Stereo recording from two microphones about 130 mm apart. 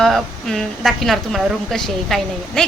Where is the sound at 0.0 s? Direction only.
Centre (ahead or behind).